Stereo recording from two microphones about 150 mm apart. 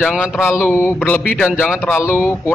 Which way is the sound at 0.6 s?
10° left (ahead or behind).